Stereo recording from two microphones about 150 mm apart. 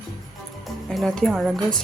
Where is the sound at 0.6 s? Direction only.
Centre (ahead or behind).